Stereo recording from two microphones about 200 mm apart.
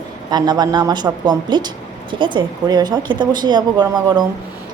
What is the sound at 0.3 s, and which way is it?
Speech, 20° right (ahead or behind).